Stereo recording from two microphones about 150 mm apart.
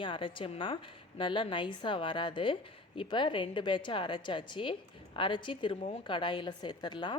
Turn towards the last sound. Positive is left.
turn(degrees=30)  # may be behind; listen again after turning